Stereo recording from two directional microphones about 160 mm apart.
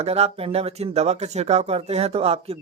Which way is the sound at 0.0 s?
40° right (ahead or behind).